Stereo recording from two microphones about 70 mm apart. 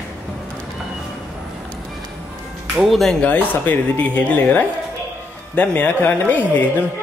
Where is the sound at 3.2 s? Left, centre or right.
Left.